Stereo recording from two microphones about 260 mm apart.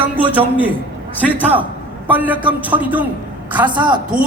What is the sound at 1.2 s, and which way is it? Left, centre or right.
A man's voice, centre.